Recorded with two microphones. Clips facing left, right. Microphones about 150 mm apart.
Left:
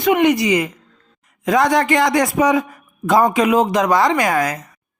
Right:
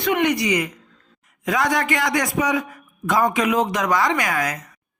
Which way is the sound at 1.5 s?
35° left (ahead or behind).